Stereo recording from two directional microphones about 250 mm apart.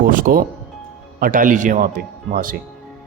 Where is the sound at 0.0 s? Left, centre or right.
Right.